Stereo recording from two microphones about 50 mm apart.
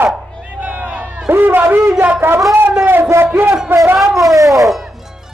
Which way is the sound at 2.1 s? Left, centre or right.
Right.